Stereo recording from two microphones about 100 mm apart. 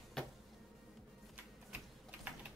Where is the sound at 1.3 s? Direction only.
15° right (ahead or behind).